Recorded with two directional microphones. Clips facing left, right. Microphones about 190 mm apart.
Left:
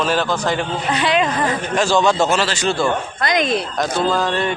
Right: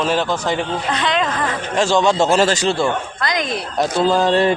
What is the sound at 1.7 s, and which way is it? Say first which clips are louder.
Speech: right 1 dB; 25° right (ahead or behind).